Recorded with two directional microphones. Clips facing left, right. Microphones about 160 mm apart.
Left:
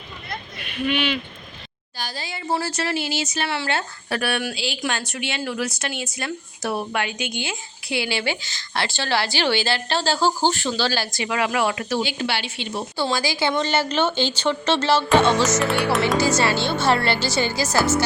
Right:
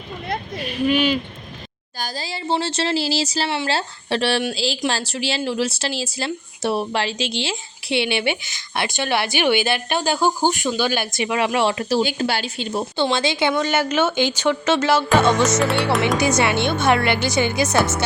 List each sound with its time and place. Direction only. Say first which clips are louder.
0.6 s speech: right 4 dB; 40° right (ahead or behind)
12.0 s a woman's voice: right 3 dB; 45° right (ahead or behind)
13.0 s speech: right 3 dB; 20° right (ahead or behind)
13.5 s speech: right 2 dB; 10° right (ahead or behind)